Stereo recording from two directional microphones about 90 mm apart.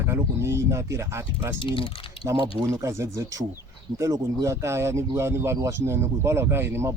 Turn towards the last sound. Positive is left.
turn(degrees=-25)  # may be behind; listen again after turning